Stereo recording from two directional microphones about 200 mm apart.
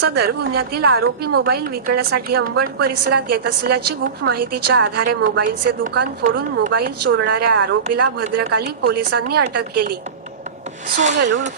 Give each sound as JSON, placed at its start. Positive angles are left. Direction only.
{"t": 0.7, "sound": "a woman's voice", "side_deg": -50}
{"t": 10.8, "sound": "speech", "side_deg": -35}